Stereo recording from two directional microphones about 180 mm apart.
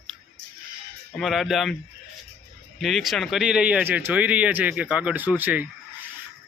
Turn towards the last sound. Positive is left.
turn(degrees=-10)  # may be behind; listen again after turning